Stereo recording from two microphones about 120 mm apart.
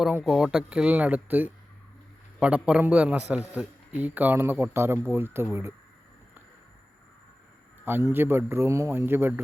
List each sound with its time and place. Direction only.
0.0 s a man's voice: 5° right (ahead or behind)
7.9 s a man's voice: 20° right (ahead or behind)